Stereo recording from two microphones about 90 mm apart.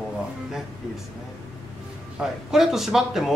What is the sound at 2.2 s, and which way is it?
Speech, 5° right (ahead or behind).